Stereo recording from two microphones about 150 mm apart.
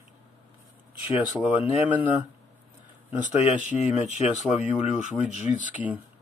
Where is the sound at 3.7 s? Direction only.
50° left (ahead or behind).